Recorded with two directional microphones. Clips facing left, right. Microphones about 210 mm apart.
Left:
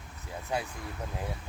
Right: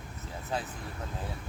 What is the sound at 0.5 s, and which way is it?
Speech, 15° left (ahead or behind).